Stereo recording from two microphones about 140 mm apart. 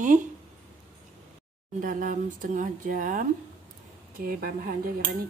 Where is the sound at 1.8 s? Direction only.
75° right (ahead or behind).